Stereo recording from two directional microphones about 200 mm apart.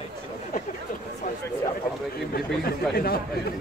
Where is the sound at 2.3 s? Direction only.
50° left (ahead or behind).